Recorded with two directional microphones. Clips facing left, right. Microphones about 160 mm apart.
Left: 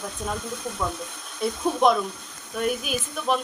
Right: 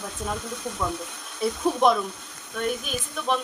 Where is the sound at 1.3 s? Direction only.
Centre (ahead or behind).